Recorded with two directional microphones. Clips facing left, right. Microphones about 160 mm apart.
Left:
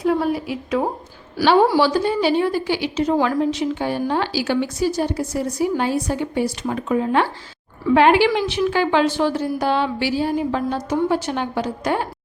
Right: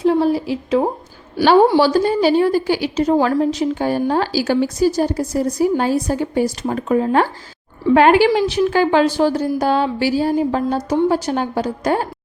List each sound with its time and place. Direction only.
0.0 s a woman's voice: 30° right (ahead or behind)
1.8 s a woman's voice: 40° right (ahead or behind)